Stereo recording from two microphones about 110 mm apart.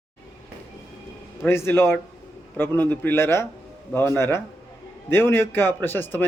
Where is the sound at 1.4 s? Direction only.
20° left (ahead or behind).